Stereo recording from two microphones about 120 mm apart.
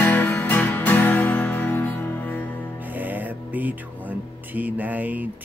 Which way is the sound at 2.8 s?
15° right (ahead or behind).